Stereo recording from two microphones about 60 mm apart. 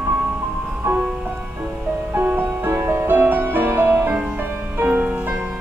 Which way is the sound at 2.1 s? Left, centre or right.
Right.